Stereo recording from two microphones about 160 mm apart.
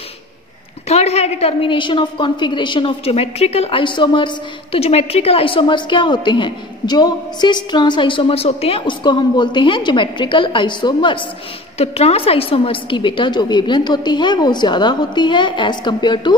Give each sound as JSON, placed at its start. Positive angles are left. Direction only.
{"t": 0.8, "sound": "a woman's voice", "side_deg": 40}
{"t": 11.8, "sound": "a woman's voice", "side_deg": 40}